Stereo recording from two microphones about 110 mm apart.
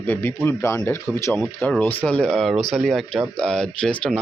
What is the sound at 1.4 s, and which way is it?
Speech, 5° left (ahead or behind).